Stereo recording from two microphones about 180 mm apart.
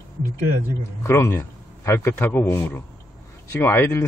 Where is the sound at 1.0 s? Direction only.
15° left (ahead or behind).